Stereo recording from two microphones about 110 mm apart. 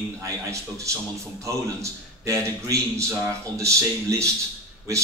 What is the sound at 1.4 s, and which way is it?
A man's voice, 25° right (ahead or behind).